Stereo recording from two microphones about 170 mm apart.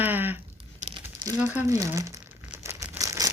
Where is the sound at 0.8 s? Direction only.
45° right (ahead or behind).